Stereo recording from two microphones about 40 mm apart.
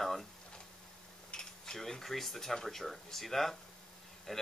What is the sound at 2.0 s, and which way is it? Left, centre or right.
Speech, centre.